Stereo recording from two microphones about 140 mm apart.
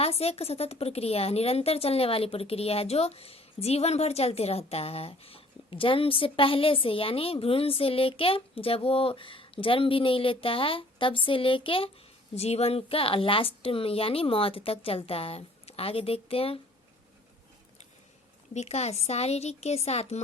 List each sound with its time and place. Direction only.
0.0 s a woman's voice: 45° left (ahead or behind)
18.5 s a woman's voice: 50° left (ahead or behind)